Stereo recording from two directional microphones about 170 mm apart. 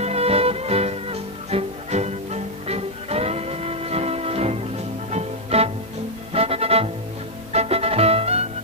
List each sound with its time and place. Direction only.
0.0 s music: 35° right (ahead or behind)